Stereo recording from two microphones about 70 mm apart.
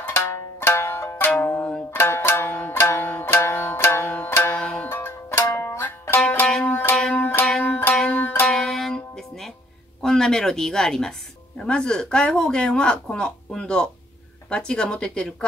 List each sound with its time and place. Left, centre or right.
0.0 s music: left
2.0 s zither: left
4.2 s music: left
4.6 s music: centre
4.8 s music: left
8.5 s music: centre
10.0 s speech: centre